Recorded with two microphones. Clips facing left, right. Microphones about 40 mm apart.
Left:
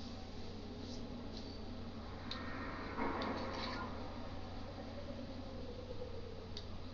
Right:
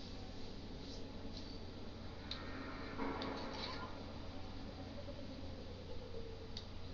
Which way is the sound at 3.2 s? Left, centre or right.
Centre.